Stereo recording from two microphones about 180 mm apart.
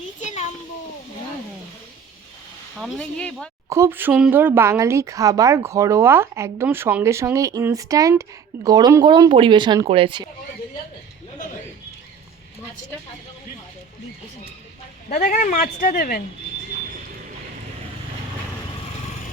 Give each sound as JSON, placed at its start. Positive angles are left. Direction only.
{"t": 0.2, "sound": "a sound", "side_deg": 40}
{"t": 2.7, "sound": "speech", "side_deg": 0}
{"t": 3.7, "sound": "speech", "side_deg": -15}
{"t": 15.1, "sound": "speech", "side_deg": 45}